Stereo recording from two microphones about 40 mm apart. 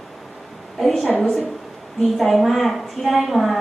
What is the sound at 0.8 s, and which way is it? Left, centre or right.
A woman's voice, centre.